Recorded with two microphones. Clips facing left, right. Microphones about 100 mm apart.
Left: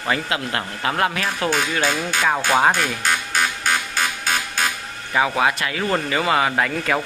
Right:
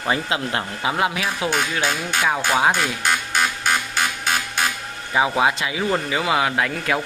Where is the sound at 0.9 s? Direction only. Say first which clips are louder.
Left 1 dB; 10° right (ahead or behind).